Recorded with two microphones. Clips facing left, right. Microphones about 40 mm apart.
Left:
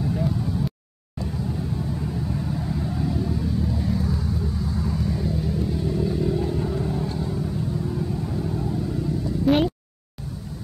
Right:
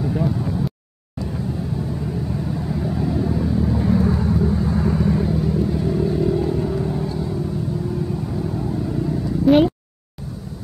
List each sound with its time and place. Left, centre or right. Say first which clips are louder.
0.0 s vehicle: right 3 dB; centre
2.0 s vehicle: right 3 dB; centre; by 5.3 s right
5.6 s vehicle: right 5 dB; centre
9.5 s a sound: right 6 dB; centre